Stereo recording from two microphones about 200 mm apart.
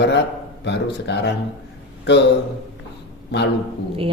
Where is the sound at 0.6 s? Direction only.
60° left (ahead or behind).